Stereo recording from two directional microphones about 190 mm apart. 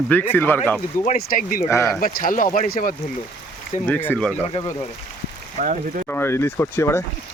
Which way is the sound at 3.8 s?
10° left (ahead or behind).